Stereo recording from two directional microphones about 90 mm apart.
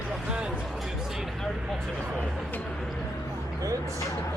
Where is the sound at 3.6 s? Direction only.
40° right (ahead or behind).